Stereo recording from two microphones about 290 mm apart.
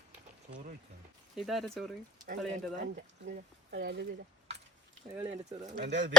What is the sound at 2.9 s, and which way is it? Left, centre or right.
Speech, right.